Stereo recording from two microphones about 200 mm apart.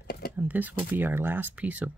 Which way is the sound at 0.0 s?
50° left (ahead or behind).